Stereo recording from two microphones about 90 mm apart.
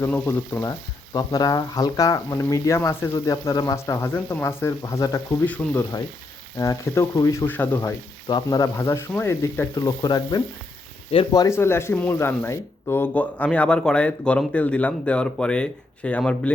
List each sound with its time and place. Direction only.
0.1 s speech: 25° left (ahead or behind)
1.1 s speech: 45° left (ahead or behind)
4.8 s speech: 40° left (ahead or behind)
5.6 s speech: 10° left (ahead or behind)
6.6 s speech: 35° left (ahead or behind)
7.2 s speech: 45° left (ahead or behind)
7.4 s speech: 20° left (ahead or behind)
8.4 s speech: 40° left (ahead or behind)
9.7 s speech: 50° left (ahead or behind)
11.1 s speech: 90° left
11.4 s speech: 30° left (ahead or behind); by 16.5 s 15° left (ahead or behind)